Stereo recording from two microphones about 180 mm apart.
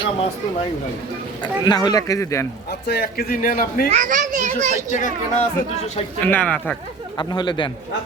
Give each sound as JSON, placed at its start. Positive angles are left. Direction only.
{"t": 1.4, "sound": "speech", "side_deg": 20}
{"t": 2.8, "sound": "a man's voice", "side_deg": 60}
{"t": 3.9, "sound": "a child's voice", "side_deg": -45}
{"t": 4.9, "sound": "speech", "side_deg": 45}
{"t": 6.2, "sound": "speech", "side_deg": 10}
{"t": 7.2, "sound": "speech", "side_deg": 25}